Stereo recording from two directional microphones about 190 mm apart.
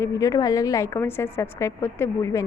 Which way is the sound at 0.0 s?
15° left (ahead or behind).